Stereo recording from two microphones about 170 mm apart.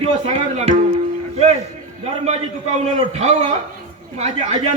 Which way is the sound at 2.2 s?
40° right (ahead or behind).